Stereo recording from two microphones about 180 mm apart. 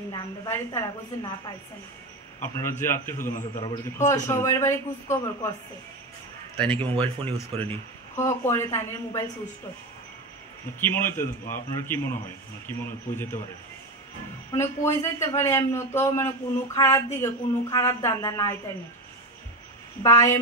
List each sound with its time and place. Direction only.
0.1 s a woman's voice: 20° left (ahead or behind)
2.4 s speech: 15° left (ahead or behind)
6.6 s speech: 10° left (ahead or behind)
10.8 s speech: 10° left (ahead or behind)
14.5 s speech: 15° left (ahead or behind)
20.0 s a woman's voice: 20° left (ahead or behind)